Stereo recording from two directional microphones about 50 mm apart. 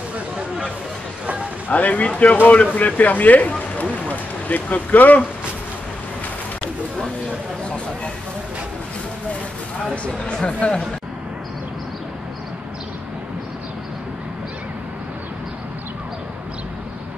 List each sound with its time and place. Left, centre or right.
1.7 s speech: left
3.9 s a sound: left
10.2 s speech: centre